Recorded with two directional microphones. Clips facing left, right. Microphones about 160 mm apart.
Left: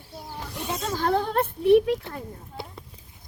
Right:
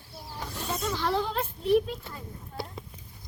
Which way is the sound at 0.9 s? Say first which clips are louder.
Left 6 dB; 50° left (ahead or behind).